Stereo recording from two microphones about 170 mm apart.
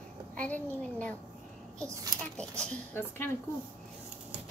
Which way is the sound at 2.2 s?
5° left (ahead or behind).